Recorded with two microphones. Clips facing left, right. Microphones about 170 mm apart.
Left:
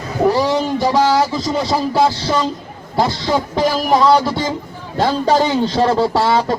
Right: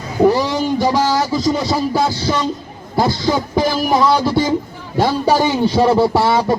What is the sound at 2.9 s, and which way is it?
Speech, 5° right (ahead or behind).